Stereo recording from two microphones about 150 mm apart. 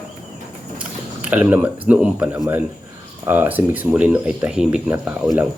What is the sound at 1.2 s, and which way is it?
Speech, 10° right (ahead or behind).